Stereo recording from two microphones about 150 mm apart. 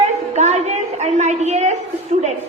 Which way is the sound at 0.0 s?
50° right (ahead or behind).